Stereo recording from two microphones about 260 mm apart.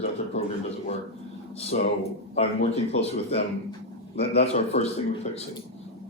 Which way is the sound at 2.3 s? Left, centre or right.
Left.